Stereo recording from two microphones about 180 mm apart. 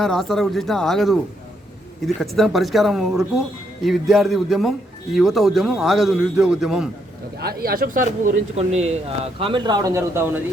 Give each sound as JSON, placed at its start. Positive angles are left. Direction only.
{"t": 0.0, "sound": "a man's voice", "side_deg": 0}
{"t": 7.3, "sound": "speech", "side_deg": -60}